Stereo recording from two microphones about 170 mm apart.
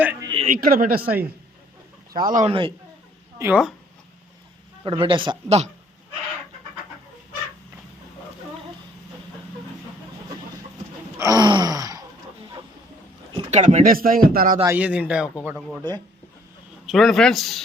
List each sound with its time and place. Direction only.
0.2 s a sound: 25° right (ahead or behind)
0.4 s a man's voice: 55° right (ahead or behind)
1.0 s a man's voice: 10° right (ahead or behind)
2.1 s a man's voice: 50° right (ahead or behind)
2.5 s a man's voice: 30° right (ahead or behind)
3.3 s speech: 15° right (ahead or behind)
4.9 s a man's voice: 30° right (ahead or behind)
11.2 s gasp: 20° right (ahead or behind)
13.3 s speech: 40° right (ahead or behind)
14.6 s a man's voice: 10° right (ahead or behind)
16.8 s speech: centre (ahead or behind)